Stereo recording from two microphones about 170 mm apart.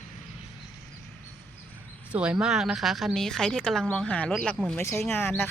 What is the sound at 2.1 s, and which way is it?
A woman's voice, 5° right (ahead or behind).